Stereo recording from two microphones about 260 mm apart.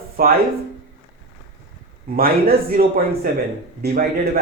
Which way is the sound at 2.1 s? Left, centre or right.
Right.